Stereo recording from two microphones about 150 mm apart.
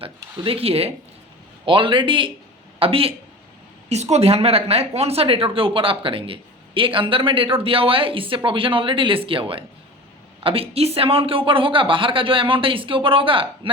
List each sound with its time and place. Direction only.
0.0 s speech: 40° right (ahead or behind)